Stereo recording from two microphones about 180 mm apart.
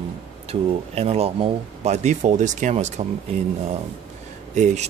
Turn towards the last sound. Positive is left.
turn(degrees=-40)  # may be behind; listen again after turning